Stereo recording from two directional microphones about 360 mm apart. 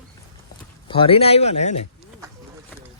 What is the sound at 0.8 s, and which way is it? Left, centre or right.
Speech, centre.